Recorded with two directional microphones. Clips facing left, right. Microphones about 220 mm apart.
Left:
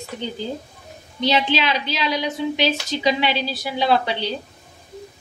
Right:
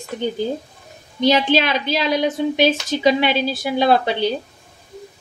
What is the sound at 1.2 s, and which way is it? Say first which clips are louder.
A woman's voice: right 4 dB; 50° right (ahead or behind).